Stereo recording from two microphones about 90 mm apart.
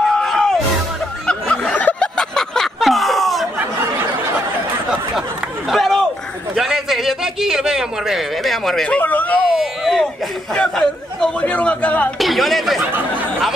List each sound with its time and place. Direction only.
0.0 s music: 5° left (ahead or behind)
1.2 s a sound: 10° left (ahead or behind)
5.7 s a sound: centre (ahead or behind)
6.5 s a man's voice: 5° right (ahead or behind)
8.8 s speech: 15° left (ahead or behind)
9.5 s speech: centre (ahead or behind)
10.5 s a man's voice: 10° left (ahead or behind)
12.2 s speech: centre (ahead or behind)